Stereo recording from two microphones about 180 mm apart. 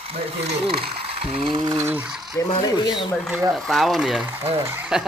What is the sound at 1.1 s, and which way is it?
Ratchet, 30° right (ahead or behind).